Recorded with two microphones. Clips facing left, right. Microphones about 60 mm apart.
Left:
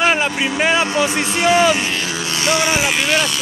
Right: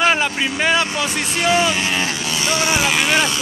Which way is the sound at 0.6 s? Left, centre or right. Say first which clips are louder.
Left 1 dB; centre.